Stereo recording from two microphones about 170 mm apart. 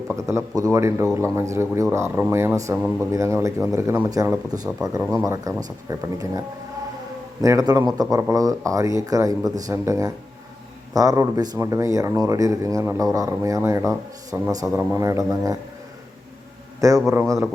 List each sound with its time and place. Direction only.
0.3 s a man's voice: 20° right (ahead or behind)
7.4 s a man's voice: 20° right (ahead or behind)
17.1 s a man's voice: 20° right (ahead or behind)